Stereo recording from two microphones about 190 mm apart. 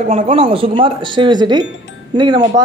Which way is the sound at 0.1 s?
35° right (ahead or behind).